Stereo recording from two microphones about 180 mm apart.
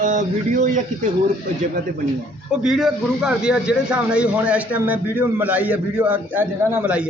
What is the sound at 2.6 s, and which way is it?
A man's voice, centre (ahead or behind).